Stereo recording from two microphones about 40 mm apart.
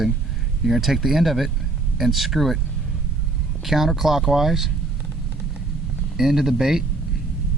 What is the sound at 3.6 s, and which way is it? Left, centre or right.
Speech, centre.